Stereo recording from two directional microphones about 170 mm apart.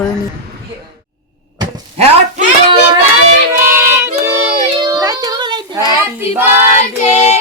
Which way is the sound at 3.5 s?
15° right (ahead or behind).